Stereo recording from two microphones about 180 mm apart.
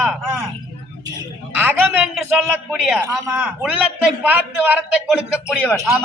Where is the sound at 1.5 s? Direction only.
10° right (ahead or behind).